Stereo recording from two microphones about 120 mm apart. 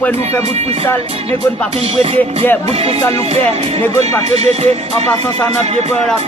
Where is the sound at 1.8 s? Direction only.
55° right (ahead or behind).